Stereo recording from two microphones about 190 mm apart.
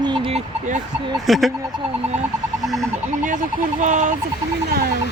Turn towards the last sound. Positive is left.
turn(degrees=-40)  # may be behind; listen again after turning